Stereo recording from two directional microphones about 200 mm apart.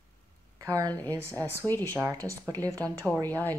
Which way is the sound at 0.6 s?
15° right (ahead or behind).